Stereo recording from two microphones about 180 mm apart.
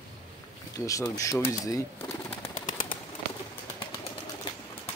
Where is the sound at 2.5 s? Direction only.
50° left (ahead or behind).